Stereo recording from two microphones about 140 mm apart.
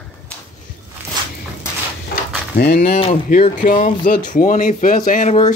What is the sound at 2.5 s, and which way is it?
Speech, 75° left (ahead or behind).